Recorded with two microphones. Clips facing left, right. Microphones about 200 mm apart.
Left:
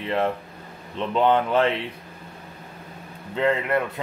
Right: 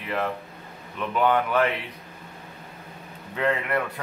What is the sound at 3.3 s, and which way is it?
Speech, 25° left (ahead or behind).